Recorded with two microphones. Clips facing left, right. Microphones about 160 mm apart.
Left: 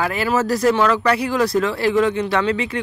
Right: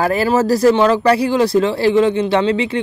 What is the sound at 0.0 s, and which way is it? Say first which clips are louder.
Speech: right 5 dB; 35° right (ahead or behind).